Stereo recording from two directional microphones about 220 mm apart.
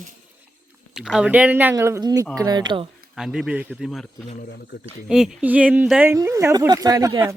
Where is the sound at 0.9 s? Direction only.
Centre (ahead or behind); by 2.9 s 20° right (ahead or behind).